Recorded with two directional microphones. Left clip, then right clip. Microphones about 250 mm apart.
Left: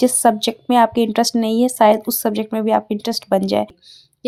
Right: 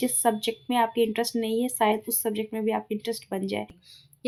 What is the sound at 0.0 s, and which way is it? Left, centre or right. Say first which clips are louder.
A woman's voice: left 10 dB; left.